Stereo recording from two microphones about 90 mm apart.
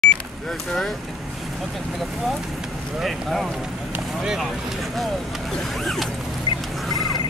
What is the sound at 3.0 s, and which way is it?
Speech, centre (ahead or behind).